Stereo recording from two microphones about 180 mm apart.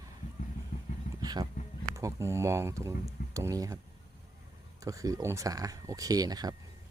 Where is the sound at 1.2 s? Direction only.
25° right (ahead or behind).